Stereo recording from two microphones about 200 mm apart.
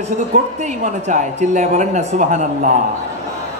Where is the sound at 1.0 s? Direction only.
35° right (ahead or behind).